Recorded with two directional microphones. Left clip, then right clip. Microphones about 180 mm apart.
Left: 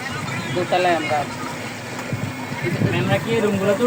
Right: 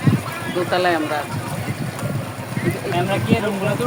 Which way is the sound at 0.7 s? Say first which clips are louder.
Left 1 dB; 25° right (ahead or behind).